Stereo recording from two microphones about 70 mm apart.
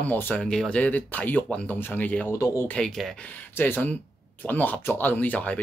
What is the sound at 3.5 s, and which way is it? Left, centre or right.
Speech, left.